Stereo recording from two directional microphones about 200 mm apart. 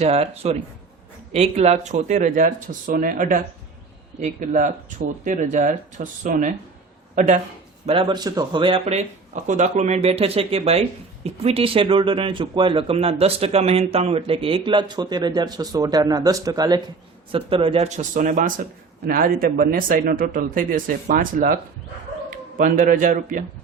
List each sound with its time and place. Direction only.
0.0 s speech: 30° right (ahead or behind)
7.9 s speech: 25° right (ahead or behind); by 23.4 s 40° right (ahead or behind)